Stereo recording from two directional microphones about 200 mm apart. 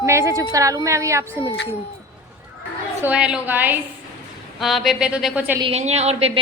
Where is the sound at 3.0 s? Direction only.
5° right (ahead or behind).